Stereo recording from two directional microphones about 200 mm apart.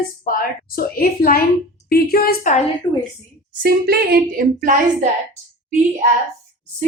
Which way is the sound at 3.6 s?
50° right (ahead or behind).